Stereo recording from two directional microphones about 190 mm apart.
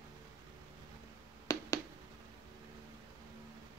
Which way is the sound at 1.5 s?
20° left (ahead or behind).